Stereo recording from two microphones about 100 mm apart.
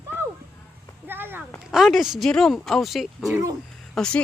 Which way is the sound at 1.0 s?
20° right (ahead or behind).